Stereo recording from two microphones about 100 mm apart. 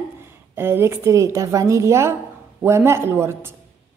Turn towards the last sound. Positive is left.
turn(degrees=-25)  # may be behind; listen again after turning